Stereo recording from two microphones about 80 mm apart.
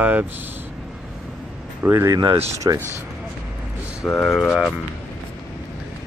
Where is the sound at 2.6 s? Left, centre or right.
Right.